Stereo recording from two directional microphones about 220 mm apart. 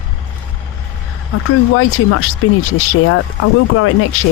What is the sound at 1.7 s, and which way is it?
Speech, 75° left (ahead or behind).